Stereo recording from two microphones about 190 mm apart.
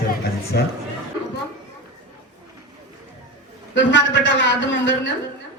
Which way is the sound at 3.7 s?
70° left (ahead or behind).